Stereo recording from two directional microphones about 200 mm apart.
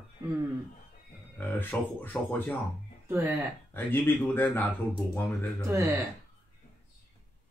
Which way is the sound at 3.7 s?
10° left (ahead or behind).